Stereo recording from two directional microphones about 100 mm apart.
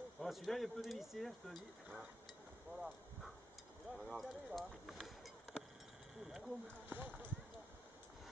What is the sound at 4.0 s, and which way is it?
Speech, centre (ahead or behind).